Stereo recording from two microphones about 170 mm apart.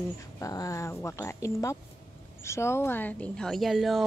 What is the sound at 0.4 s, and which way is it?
A woman's voice, 20° left (ahead or behind).